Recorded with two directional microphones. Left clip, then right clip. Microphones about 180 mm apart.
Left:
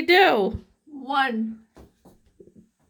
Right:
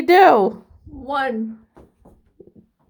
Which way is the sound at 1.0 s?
30° left (ahead or behind).